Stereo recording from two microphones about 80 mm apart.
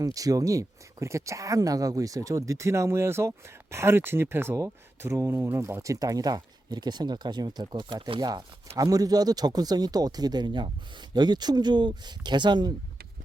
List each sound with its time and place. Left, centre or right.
0.0 s speech: right